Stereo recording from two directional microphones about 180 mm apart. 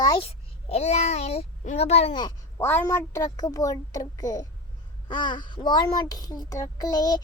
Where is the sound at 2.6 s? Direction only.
15° left (ahead or behind).